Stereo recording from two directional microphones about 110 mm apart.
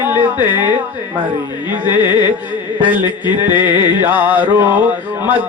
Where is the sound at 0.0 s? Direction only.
20° right (ahead or behind).